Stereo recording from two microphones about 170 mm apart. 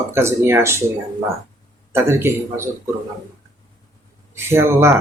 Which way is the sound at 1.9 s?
15° right (ahead or behind).